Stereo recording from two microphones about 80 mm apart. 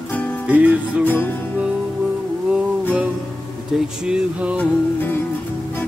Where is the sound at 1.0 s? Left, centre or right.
Left.